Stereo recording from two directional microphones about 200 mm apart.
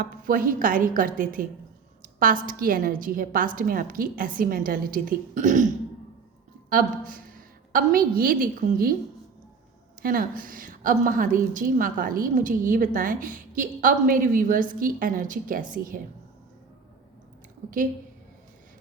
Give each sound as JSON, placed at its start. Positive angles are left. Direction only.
{"t": 0.0, "sound": "a woman's voice", "side_deg": -45}
{"t": 2.0, "sound": "a sound", "side_deg": -45}
{"t": 2.5, "sound": "a woman's voice", "side_deg": -45}
{"t": 6.7, "sound": "a woman's voice", "side_deg": -45}
{"t": 10.0, "sound": "a woman's voice", "side_deg": -45}